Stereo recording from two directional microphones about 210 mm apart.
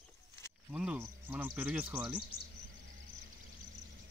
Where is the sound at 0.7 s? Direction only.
5° right (ahead or behind).